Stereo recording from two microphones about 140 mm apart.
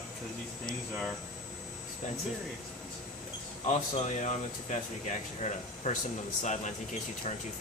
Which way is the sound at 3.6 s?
55° left (ahead or behind).